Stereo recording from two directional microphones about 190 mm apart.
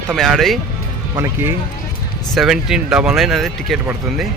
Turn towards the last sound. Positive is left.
turn(degrees=0)  # may be behind; listen again after turning